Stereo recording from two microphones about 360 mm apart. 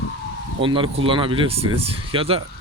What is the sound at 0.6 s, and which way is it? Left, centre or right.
Speech, centre.